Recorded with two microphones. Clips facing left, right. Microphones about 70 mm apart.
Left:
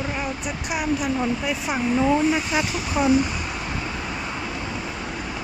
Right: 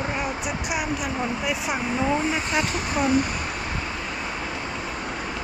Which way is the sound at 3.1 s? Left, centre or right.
Right.